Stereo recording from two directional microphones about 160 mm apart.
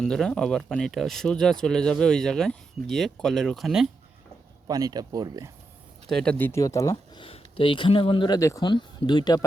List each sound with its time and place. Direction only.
0.0 s speech: 5° left (ahead or behind)
4.7 s speech: 25° right (ahead or behind)
6.1 s speech: 5° left (ahead or behind); by 8.4 s 30° left (ahead or behind)
8.4 s speech: 20° left (ahead or behind)